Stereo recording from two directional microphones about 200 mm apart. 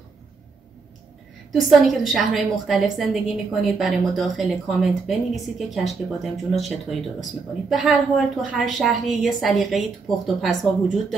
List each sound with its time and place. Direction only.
1.5 s a woman's voice: centre (ahead or behind)